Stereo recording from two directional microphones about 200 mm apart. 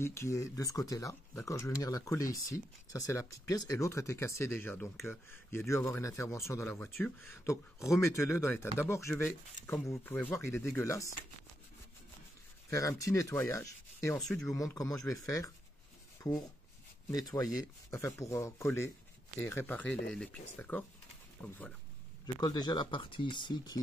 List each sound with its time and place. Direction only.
0.0 s speech: 15° left (ahead or behind)
12.6 s speech: 15° left (ahead or behind)
14.2 s speech: 5° left (ahead or behind)
14.5 s speech: 15° left (ahead or behind)
16.2 s rub: 15° left (ahead or behind)
17.1 s speech: 20° left (ahead or behind)
22.2 s speech: 20° left (ahead or behind)